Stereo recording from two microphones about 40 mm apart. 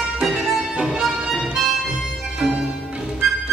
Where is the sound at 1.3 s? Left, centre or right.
Centre.